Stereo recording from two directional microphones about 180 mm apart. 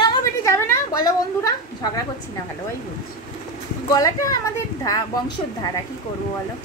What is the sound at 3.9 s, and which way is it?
Speech, 20° left (ahead or behind).